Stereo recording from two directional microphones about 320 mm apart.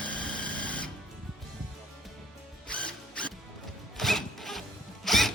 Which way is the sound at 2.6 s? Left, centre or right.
Centre.